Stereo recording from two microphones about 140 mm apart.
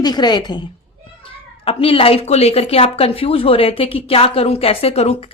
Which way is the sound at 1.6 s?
40° left (ahead or behind).